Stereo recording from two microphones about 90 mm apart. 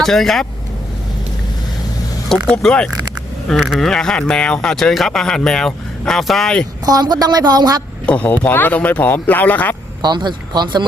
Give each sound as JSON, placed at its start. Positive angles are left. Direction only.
{"t": 0.0, "sound": "speech", "side_deg": 5}
{"t": 2.3, "sound": "speech", "side_deg": 5}
{"t": 6.8, "sound": "speech", "side_deg": -45}
{"t": 8.0, "sound": "speech", "side_deg": 15}
{"t": 10.0, "sound": "speech", "side_deg": -50}